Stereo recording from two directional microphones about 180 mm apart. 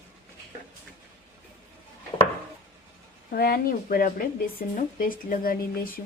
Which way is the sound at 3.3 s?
60° left (ahead or behind).